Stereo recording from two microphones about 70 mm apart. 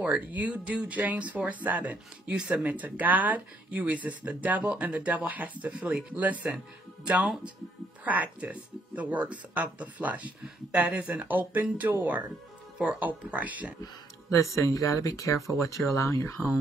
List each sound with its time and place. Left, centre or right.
0.0 s speech: right
2.3 s speech: centre
2.6 s speech: right
8.0 s speech: right
14.3 s speech: left